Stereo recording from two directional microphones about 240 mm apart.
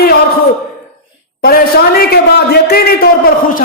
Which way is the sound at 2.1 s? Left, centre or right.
Left.